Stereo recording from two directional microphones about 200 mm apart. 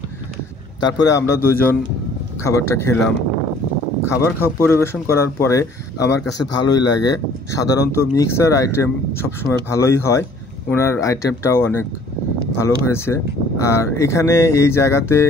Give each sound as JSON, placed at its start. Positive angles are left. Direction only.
{"t": 0.8, "sound": "speech", "side_deg": 20}
{"t": 4.0, "sound": "a man's voice", "side_deg": 15}